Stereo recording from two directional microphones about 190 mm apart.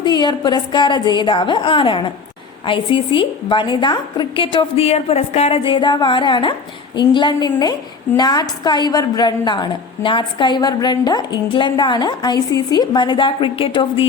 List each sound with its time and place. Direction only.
0.0 s a woman's voice: 20° left (ahead or behind)